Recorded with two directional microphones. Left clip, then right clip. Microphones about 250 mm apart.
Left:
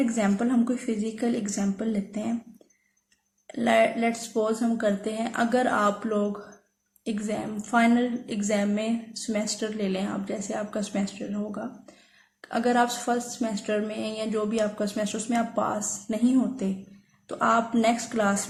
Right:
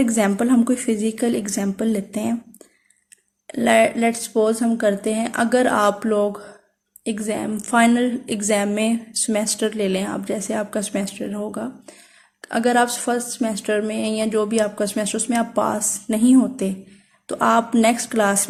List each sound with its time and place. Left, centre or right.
0.0 s a woman's voice: right
3.4 s a woman's voice: right